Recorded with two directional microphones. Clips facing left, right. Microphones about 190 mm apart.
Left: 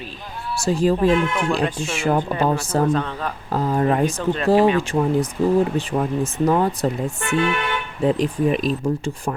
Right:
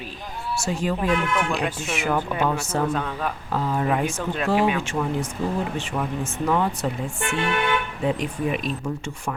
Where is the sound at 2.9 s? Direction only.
5° right (ahead or behind).